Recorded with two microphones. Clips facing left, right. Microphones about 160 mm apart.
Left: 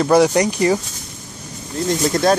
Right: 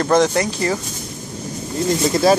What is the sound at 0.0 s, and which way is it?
Speech, 10° left (ahead or behind).